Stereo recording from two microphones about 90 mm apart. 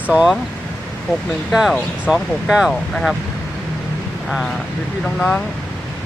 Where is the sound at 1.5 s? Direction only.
5° right (ahead or behind).